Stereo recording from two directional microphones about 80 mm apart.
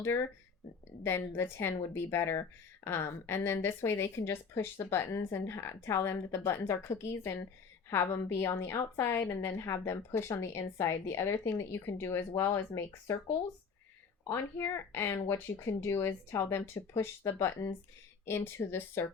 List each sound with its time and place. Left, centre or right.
1.0 s a woman's voice: left
14.3 s a woman's voice: left